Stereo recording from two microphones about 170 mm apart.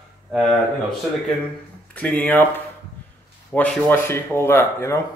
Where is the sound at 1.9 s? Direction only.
10° left (ahead or behind).